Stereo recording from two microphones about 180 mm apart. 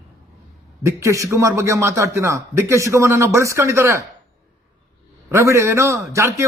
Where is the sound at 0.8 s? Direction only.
15° right (ahead or behind).